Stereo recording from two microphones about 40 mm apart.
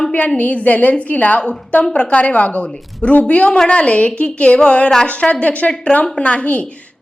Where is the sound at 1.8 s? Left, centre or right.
Centre.